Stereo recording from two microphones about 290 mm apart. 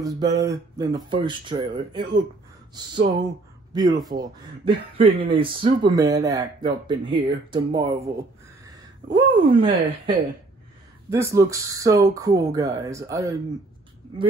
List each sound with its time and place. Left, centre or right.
0.0 s speech: centre